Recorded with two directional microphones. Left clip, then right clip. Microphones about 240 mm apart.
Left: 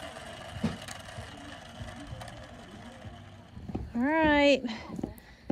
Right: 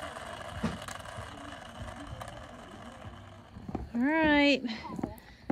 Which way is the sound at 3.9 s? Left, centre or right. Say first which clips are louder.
Left 1 dB; centre.